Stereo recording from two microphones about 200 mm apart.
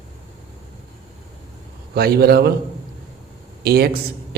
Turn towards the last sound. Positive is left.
turn(degrees=-50)  # may be behind; listen again after turning